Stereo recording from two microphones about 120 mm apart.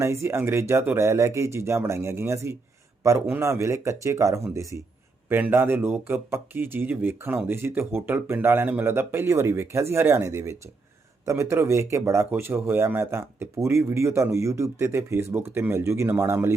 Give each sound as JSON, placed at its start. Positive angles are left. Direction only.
{"t": 0.0, "sound": "speech", "side_deg": -25}